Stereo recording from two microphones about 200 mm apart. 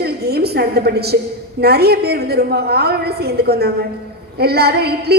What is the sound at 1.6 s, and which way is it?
A woman's voice, 50° right (ahead or behind).